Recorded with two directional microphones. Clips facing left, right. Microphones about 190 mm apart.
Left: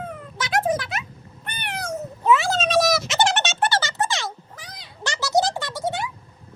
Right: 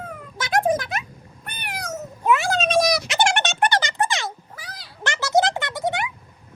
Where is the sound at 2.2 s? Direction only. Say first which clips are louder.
Left 1 dB; 15° right (ahead or behind).